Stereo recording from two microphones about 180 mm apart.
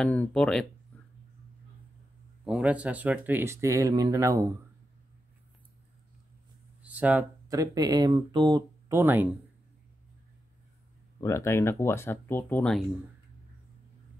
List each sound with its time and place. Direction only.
0.0 s speech: 5° left (ahead or behind)
0.9 s a sound: 10° left (ahead or behind)
2.4 s speech: 5° right (ahead or behind)
6.8 s speech: 10° right (ahead or behind)
11.1 s speech: 15° left (ahead or behind)